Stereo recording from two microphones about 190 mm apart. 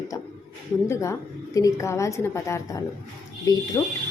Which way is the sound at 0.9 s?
15° left (ahead or behind).